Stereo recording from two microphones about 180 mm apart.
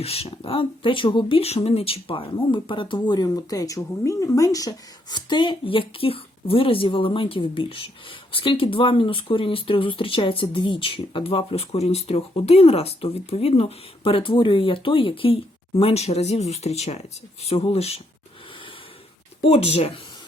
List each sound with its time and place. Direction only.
0.0 s speech: 35° left (ahead or behind)
19.4 s speech: 35° left (ahead or behind)